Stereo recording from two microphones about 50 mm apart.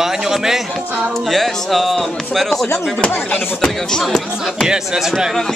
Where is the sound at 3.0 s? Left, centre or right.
Left.